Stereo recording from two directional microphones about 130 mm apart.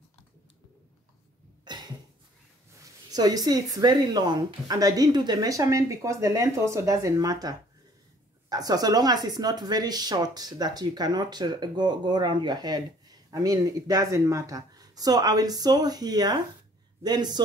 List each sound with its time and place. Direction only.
1.6 s cough: 35° right (ahead or behind)
2.8 s speech: 30° right (ahead or behind)